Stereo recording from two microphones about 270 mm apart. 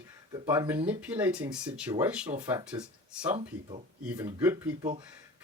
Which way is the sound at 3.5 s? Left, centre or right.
Right.